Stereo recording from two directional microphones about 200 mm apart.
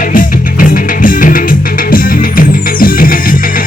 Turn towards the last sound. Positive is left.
turn(degrees=45)  # may be behind; listen again after turning